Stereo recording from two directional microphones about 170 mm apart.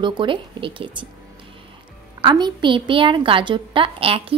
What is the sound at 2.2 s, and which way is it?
A child's voice, 25° right (ahead or behind).